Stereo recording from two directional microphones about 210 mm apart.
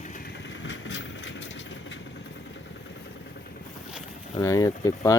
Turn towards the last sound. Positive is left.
turn(degrees=15)  # may be behind; listen again after turning